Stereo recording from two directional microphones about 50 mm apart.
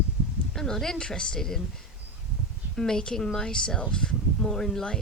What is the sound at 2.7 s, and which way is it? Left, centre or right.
Speech, centre.